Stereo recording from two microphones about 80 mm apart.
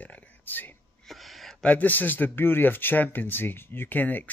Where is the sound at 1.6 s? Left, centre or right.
Left.